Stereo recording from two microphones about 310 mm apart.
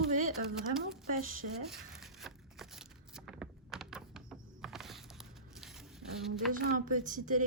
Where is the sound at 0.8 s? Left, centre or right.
Right.